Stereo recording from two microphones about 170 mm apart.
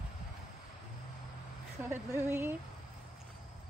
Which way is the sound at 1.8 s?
15° right (ahead or behind).